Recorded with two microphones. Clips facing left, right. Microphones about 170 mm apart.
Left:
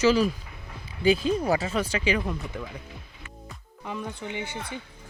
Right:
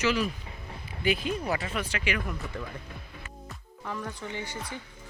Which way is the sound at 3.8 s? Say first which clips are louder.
Left 2 dB; 20° left (ahead or behind).